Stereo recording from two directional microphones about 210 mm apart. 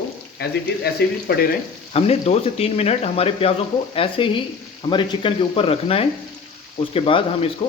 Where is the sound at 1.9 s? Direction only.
30° left (ahead or behind).